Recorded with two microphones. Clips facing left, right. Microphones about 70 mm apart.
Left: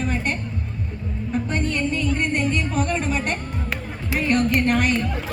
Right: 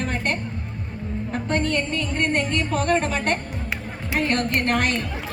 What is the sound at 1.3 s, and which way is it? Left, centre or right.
Music, right.